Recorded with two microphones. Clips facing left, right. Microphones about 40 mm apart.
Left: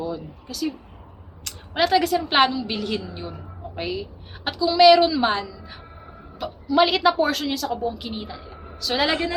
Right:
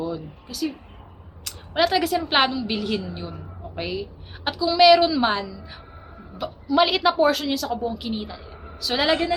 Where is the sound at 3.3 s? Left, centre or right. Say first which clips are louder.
Left 1 dB; centre.